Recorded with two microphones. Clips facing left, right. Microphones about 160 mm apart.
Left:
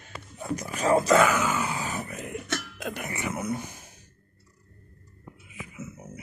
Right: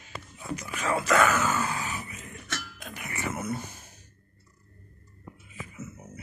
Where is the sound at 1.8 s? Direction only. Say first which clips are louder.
Left 5 dB; 50° left (ahead or behind).